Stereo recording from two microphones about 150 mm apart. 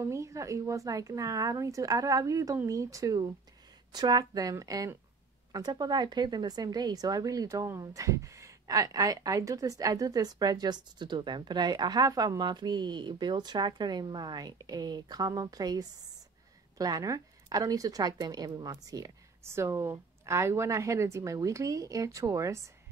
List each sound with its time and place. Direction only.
0.0 s a woman's voice: 20° right (ahead or behind)